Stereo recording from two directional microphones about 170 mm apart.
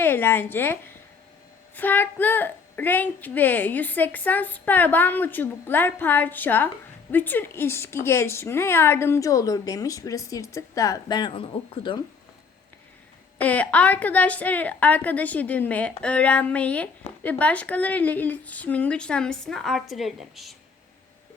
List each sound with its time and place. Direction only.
0.0 s a woman's voice: 15° left (ahead or behind); by 11.9 s 30° left (ahead or behind)
13.4 s a woman's voice: 10° left (ahead or behind)